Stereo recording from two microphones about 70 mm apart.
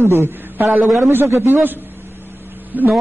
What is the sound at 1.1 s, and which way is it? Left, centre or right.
Speech, right.